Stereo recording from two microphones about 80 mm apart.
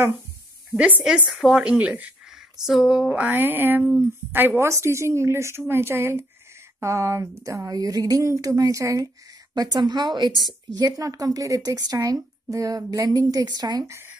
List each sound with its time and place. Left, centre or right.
1.0 s speech: centre
3.3 s speech: right
4.3 s a woman's voice: right
9.5 s a woman's voice: right
13.8 s speech: right